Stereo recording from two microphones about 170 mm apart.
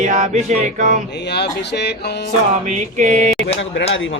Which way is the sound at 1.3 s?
75° left (ahead or behind).